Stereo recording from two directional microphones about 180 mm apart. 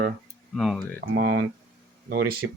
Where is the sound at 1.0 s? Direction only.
70° right (ahead or behind).